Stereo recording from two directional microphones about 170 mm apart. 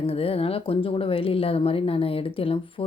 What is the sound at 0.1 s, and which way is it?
Speech, 35° left (ahead or behind).